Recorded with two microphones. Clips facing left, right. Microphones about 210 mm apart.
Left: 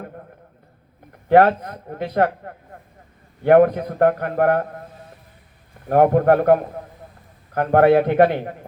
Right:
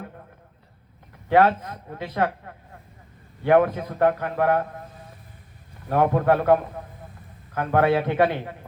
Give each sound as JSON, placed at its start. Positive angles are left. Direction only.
{"t": 1.3, "sound": "a man's voice", "side_deg": 50}
{"t": 5.9, "sound": "a man's voice", "side_deg": 50}